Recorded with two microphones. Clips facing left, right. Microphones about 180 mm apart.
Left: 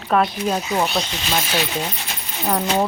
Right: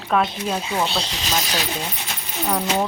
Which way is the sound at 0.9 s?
35° right (ahead or behind).